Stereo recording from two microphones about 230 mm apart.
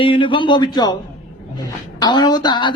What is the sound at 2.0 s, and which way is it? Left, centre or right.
Speech, centre.